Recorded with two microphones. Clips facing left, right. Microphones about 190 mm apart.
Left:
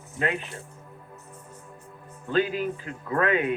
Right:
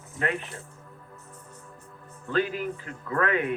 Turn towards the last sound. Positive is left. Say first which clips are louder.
# left 2 dB
turn(degrees=20)  # may be behind; listen again after turning